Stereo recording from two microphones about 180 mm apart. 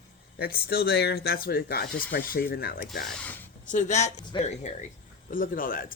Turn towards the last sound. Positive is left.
turn(degrees=50)  # may be behind; listen again after turning